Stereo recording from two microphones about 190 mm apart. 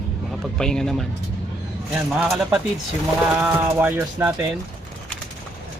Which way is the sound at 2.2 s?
5° right (ahead or behind).